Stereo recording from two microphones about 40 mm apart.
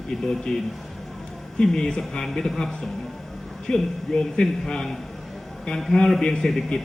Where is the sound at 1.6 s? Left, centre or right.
Centre.